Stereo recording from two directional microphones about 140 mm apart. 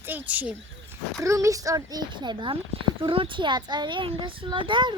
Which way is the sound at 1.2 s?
20° right (ahead or behind).